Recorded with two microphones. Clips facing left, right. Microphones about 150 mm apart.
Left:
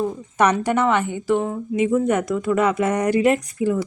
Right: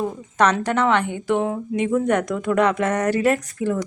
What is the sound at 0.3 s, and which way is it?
A woman's voice, 10° left (ahead or behind).